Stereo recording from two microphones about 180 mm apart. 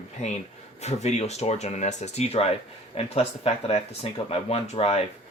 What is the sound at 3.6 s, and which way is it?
Speech, 35° left (ahead or behind).